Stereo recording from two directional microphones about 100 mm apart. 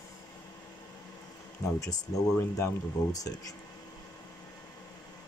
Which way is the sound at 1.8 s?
40° left (ahead or behind).